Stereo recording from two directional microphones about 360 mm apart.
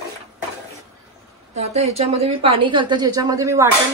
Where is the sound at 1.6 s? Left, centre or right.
Centre.